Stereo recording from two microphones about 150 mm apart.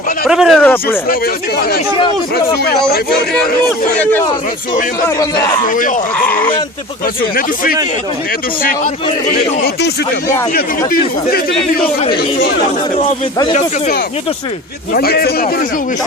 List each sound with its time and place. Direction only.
0.3 s speech: centre (ahead or behind)
0.6 s speech: 15° left (ahead or behind)
1.0 s a man's voice: 90° left
3.9 s speech: 10° left (ahead or behind)
5.0 s a man's voice: 20° left (ahead or behind)
5.6 s speech: 65° left (ahead or behind)
6.1 s speech: 10° left (ahead or behind)
7.2 s speech: 70° left (ahead or behind)
11.3 s a man's voice: 90° left
13.0 s speech: 35° left (ahead or behind)
14.9 s a man's voice: 90° left